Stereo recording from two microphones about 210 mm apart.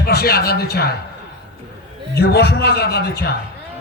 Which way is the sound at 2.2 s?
50° left (ahead or behind).